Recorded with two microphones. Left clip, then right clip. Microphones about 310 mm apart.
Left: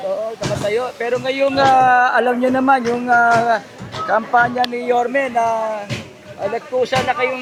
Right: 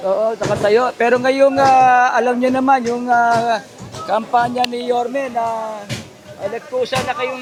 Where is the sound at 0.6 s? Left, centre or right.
Right.